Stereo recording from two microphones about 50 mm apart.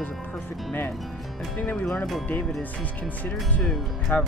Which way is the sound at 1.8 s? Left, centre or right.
Centre.